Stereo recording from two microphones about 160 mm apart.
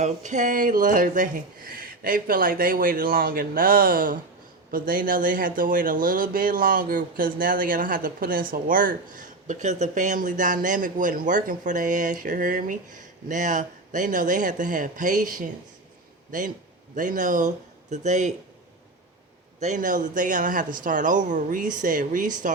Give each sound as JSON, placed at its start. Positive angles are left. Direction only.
{"t": 0.0, "sound": "speech", "side_deg": -50}
{"t": 19.5, "sound": "speech", "side_deg": -50}